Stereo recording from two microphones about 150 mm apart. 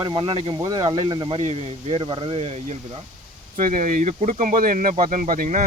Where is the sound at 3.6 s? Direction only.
60° right (ahead or behind).